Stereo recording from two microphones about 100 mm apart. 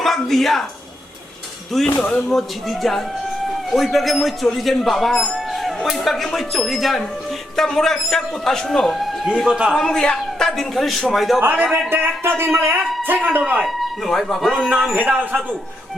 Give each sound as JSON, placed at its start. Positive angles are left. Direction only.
{"t": 0.0, "sound": "speech", "side_deg": 5}
{"t": 2.0, "sound": "speech", "side_deg": 5}
{"t": 9.8, "sound": "speech", "side_deg": 10}
{"t": 11.3, "sound": "speech", "side_deg": -15}
{"t": 12.7, "sound": "speech", "side_deg": 0}
{"t": 13.1, "sound": "speech", "side_deg": -20}
{"t": 13.4, "sound": "speech", "side_deg": -5}